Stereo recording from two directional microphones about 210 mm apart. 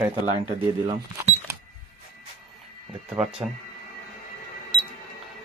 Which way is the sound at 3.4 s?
10° right (ahead or behind).